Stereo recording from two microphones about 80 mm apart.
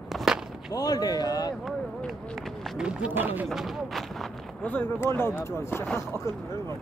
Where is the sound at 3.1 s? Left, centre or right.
Right.